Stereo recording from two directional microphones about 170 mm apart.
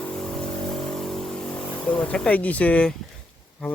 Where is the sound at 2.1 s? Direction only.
5° left (ahead or behind).